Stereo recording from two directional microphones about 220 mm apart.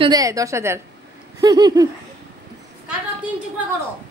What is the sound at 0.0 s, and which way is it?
A woman's voice, 15° right (ahead or behind).